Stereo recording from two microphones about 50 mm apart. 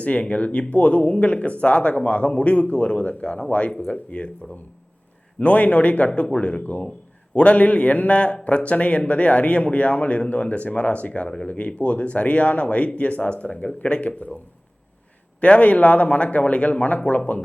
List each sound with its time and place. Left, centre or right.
0.0 s speech: left
15.4 s speech: left